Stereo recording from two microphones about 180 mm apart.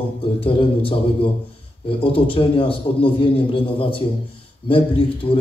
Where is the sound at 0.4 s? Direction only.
30° left (ahead or behind).